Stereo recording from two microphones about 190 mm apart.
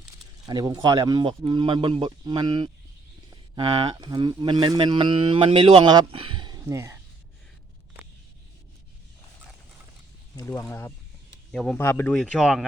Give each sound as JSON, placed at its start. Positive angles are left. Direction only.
{"t": 0.4, "sound": "speech", "side_deg": -20}
{"t": 10.3, "sound": "speech", "side_deg": 15}
{"t": 11.5, "sound": "speech", "side_deg": 0}